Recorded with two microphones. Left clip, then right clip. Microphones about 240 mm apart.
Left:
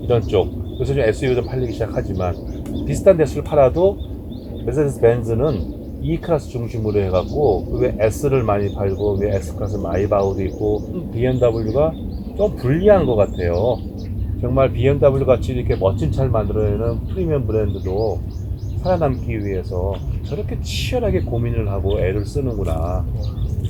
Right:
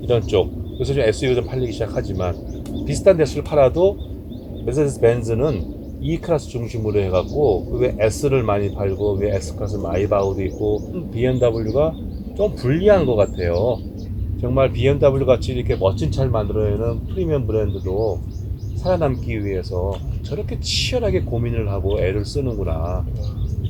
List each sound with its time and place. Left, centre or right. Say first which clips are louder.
0.1 s speech: left 1 dB; right